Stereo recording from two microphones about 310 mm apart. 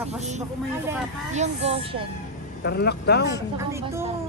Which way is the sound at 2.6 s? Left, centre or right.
Left.